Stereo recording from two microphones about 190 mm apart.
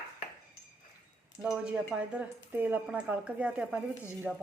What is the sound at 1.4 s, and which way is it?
Speech, 5° right (ahead or behind).